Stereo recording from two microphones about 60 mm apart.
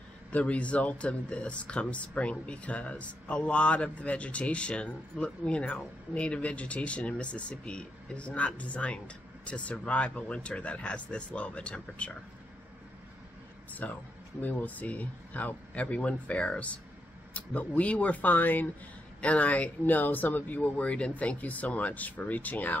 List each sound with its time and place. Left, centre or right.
0.3 s speech: left
13.8 s speech: left